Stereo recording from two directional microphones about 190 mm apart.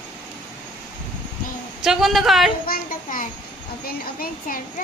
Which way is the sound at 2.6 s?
50° left (ahead or behind).